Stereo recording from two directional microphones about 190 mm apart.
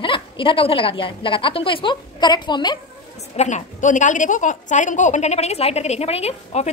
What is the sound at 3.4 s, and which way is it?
A woman's voice, 40° left (ahead or behind).